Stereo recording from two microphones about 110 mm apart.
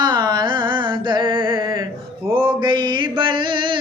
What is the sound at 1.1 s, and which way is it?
Mantra, 45° right (ahead or behind).